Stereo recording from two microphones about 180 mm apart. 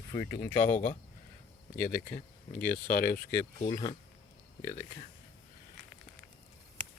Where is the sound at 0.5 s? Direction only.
45° left (ahead or behind).